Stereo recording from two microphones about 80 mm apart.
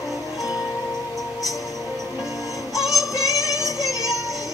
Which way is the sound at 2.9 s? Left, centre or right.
Left.